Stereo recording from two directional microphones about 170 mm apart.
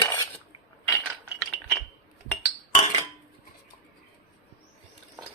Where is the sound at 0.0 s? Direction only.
15° left (ahead or behind).